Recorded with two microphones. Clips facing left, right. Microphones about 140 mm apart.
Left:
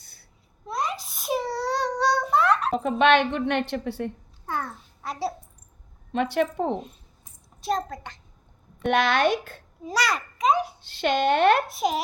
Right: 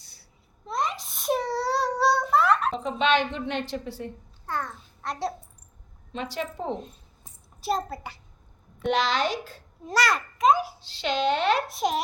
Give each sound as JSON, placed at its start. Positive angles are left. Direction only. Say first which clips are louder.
{"t": 0.0, "sound": "babbling", "louder": "left 1 dB", "side_deg": 55}
{"t": 0.7, "sound": "a sound", "louder": "even", "side_deg": 0}
{"t": 2.7, "sound": "speech", "louder": "left 4 dB", "side_deg": 55}
{"t": 4.4, "sound": "a child's voice", "louder": "left 1 dB", "side_deg": 10}
{"t": 6.1, "sound": "speech", "louder": "left 8 dB", "side_deg": 60}
{"t": 7.6, "sound": "a child's voice", "louder": "left 1 dB", "side_deg": -5}
{"t": 8.8, "sound": "speech", "louder": "left 3 dB", "side_deg": 55}
{"t": 9.8, "sound": "a child's voice", "louder": "right 1 dB", "side_deg": 0}
{"t": 10.8, "sound": "speech", "louder": "left 4 dB", "side_deg": 55}
{"t": 11.7, "sound": "a child's voice", "louder": "left 1 dB", "side_deg": 0}